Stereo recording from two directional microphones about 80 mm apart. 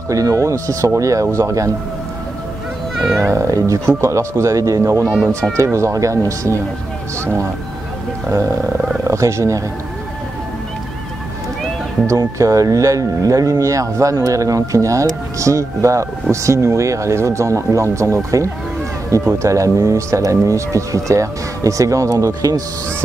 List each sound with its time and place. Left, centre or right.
0.1 s speech: right
3.2 s speech: right
5.0 s speech: centre
5.6 s speech: right
12.1 s speech: right